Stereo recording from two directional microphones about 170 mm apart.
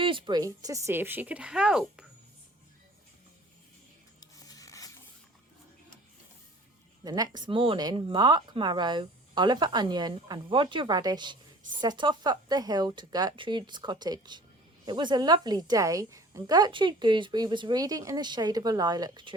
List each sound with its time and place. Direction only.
0.0 s speech: 30° right (ahead or behind); by 2.0 s 5° right (ahead or behind)
4.2 s a sound: 20° left (ahead or behind)
7.0 s a woman's voice: 25° right (ahead or behind)